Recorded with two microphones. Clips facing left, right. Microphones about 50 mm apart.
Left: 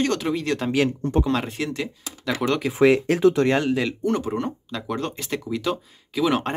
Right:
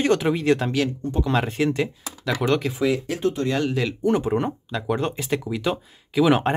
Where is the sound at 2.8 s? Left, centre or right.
Left.